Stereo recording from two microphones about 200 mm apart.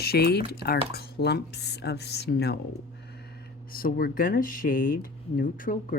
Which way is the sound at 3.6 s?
45° left (ahead or behind).